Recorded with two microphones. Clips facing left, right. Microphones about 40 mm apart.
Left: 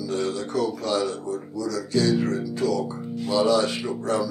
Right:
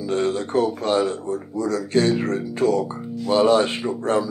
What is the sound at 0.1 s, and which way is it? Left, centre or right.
Speech, right.